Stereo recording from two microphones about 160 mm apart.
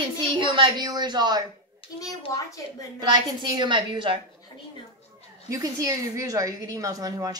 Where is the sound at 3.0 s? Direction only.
30° right (ahead or behind).